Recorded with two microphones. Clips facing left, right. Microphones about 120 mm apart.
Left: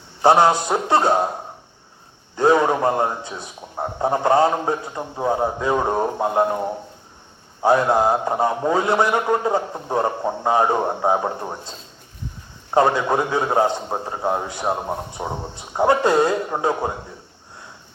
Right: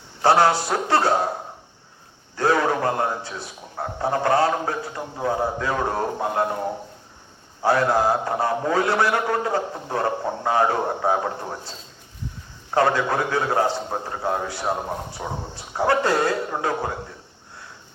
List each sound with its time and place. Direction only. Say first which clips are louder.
0.2 s a man's voice: left 3 dB; 20° left (ahead or behind)
2.3 s a man's voice: left 4 dB; 20° left (ahead or behind)
7.6 s a man's voice: left 3 dB; 20° left (ahead or behind)
12.7 s a man's voice: left 3 dB; 20° left (ahead or behind)